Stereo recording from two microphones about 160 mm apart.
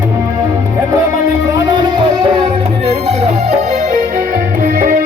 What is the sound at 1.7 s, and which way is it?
Music, 30° right (ahead or behind).